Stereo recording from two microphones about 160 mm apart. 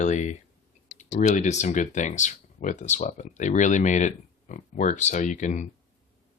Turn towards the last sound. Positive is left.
turn(degrees=50)  # may be behind; listen again after turning